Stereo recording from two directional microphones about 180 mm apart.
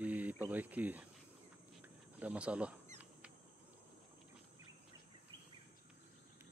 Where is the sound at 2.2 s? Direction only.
5° right (ahead or behind).